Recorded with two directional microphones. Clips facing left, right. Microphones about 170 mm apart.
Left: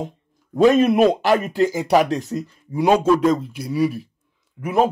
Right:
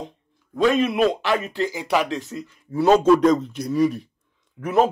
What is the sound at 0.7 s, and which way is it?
Speech, 45° left (ahead or behind).